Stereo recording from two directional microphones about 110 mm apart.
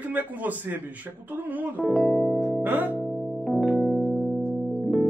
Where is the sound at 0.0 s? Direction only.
15° right (ahead or behind).